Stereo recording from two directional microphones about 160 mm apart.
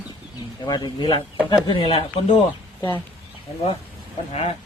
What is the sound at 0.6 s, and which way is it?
A man's voice, 25° left (ahead or behind).